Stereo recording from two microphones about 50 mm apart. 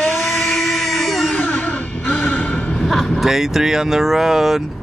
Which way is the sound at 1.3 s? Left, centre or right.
Left.